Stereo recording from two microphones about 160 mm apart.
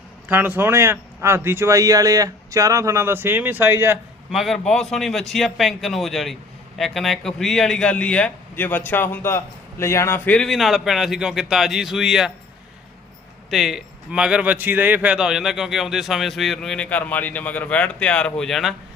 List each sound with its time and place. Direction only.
0.3 s speech: 10° right (ahead or behind)
4.3 s a man's voice: centre (ahead or behind)
13.5 s a man's voice: centre (ahead or behind)